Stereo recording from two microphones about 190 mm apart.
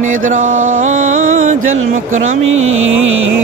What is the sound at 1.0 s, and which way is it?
Music, 90° right.